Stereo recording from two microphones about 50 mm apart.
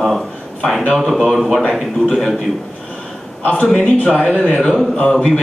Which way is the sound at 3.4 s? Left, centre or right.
Left.